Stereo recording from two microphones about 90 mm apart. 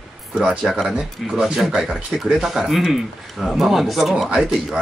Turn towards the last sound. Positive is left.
turn(degrees=-5)  # may be behind; listen again after turning